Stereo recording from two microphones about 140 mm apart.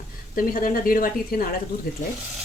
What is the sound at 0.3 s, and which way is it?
Speech, 85° left.